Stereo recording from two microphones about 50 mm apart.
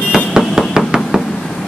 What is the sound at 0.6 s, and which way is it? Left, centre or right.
Knock, centre.